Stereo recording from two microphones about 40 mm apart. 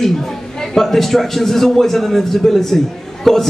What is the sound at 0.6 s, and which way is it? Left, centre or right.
A man's voice, centre.